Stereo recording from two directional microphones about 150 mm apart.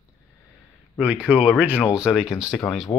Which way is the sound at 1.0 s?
10° right (ahead or behind).